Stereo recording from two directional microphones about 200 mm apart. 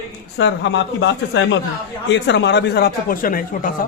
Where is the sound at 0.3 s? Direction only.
65° left (ahead or behind); by 3.8 s 45° left (ahead or behind).